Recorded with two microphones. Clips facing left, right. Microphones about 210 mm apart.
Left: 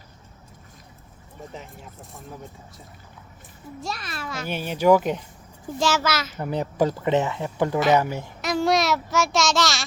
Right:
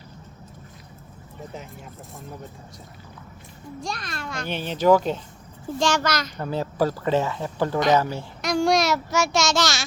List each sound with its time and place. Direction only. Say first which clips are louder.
3.8 s a child's voice: even; 5° left (ahead or behind)
6.4 s speech: left 1 dB; 15° left (ahead or behind)
8.4 s a child's voice: right 1 dB; 5° left (ahead or behind)